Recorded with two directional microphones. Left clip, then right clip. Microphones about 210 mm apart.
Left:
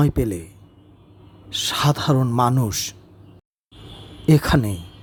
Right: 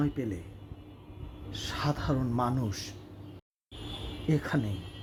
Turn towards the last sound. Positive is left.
turn(degrees=30)  # may be behind; listen again after turning